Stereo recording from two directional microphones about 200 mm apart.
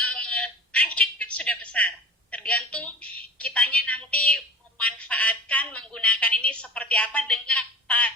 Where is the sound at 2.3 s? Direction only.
5° left (ahead or behind).